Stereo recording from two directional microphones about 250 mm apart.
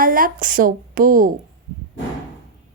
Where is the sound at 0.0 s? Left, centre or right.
Right.